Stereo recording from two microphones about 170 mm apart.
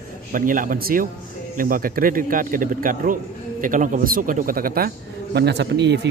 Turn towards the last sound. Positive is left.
turn(degrees=-90)